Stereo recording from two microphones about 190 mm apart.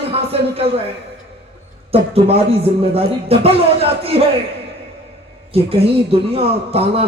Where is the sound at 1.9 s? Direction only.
30° right (ahead or behind).